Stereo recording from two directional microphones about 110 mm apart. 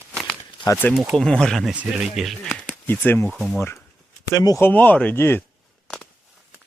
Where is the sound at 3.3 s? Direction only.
Centre (ahead or behind).